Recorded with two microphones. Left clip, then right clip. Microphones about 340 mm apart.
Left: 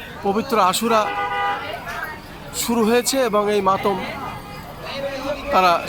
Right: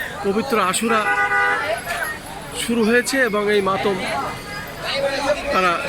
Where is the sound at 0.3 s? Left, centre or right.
Centre.